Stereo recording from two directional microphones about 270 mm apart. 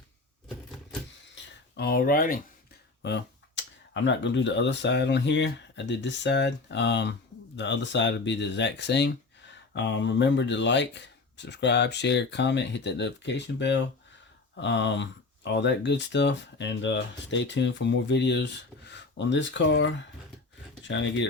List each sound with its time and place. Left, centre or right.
1.7 s speech: left